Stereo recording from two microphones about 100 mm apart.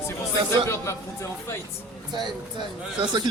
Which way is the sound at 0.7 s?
30° left (ahead or behind).